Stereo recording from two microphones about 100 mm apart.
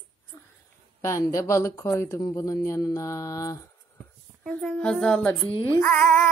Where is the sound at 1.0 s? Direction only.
30° left (ahead or behind).